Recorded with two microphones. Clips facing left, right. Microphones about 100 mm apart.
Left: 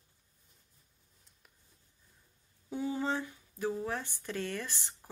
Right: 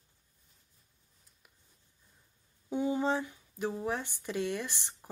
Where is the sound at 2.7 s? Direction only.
20° right (ahead or behind).